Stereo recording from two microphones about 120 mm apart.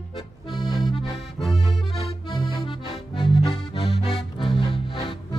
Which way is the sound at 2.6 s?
45° left (ahead or behind).